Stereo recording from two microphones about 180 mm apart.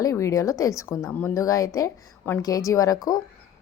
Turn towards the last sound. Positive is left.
turn(degrees=20)  # may be behind; listen again after turning